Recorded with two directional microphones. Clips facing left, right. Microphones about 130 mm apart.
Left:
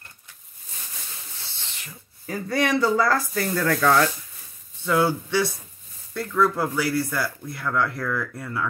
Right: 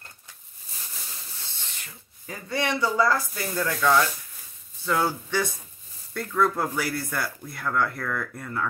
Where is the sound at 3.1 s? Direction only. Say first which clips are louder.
Left 3 dB; 55° left (ahead or behind).